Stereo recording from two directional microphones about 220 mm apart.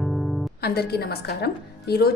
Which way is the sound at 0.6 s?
45° left (ahead or behind).